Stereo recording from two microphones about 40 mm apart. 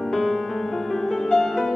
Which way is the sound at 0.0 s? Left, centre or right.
Centre.